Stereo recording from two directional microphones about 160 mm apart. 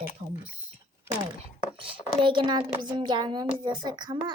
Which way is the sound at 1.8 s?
30° right (ahead or behind).